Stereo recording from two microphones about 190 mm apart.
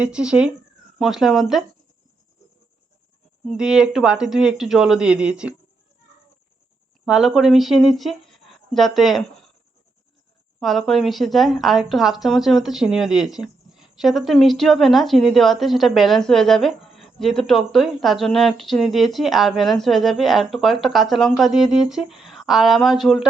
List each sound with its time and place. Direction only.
0.0 s speech: 5° right (ahead or behind)
3.4 s speech: centre (ahead or behind)
7.0 s speech: 5° right (ahead or behind)
10.6 s speech: centre (ahead or behind)